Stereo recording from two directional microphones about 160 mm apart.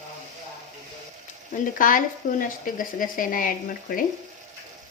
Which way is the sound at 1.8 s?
60° left (ahead or behind).